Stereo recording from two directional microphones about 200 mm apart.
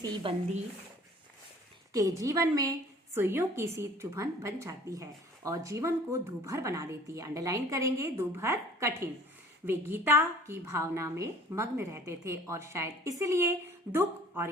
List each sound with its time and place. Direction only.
0.0 s speech: 25° right (ahead or behind)
1.9 s a woman's voice: 15° right (ahead or behind)